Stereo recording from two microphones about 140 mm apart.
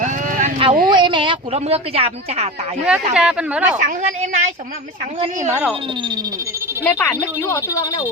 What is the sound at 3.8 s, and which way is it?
Speech, 65° right (ahead or behind).